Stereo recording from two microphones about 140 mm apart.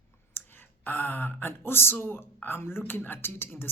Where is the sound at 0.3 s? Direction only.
15° left (ahead or behind).